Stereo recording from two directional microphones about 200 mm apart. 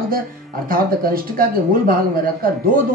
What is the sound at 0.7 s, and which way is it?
A man's voice, 45° right (ahead or behind).